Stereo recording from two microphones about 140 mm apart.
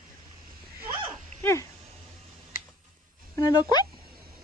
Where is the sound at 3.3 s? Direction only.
30° left (ahead or behind).